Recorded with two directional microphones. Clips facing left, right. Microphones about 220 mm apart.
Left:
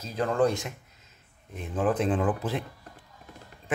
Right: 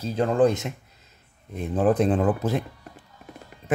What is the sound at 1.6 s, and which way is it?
Speech, 35° right (ahead or behind).